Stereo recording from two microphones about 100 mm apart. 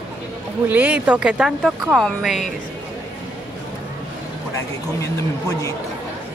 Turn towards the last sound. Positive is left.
turn(degrees=30)  # may be behind; listen again after turning